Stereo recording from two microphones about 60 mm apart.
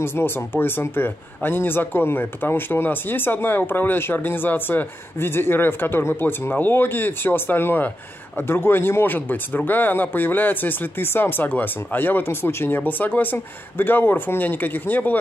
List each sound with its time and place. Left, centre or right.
0.0 s a man's voice: left